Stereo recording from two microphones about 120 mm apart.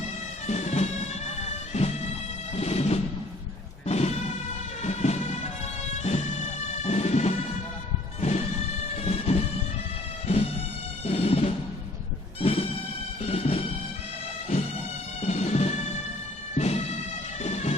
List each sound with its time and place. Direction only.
0.4 s bagpipes: 65° left (ahead or behind)
3.8 s music: 65° left (ahead or behind)
9.0 s a sound: 60° left (ahead or behind)
10.2 s music: 55° left (ahead or behind)
15.2 s music: 65° left (ahead or behind)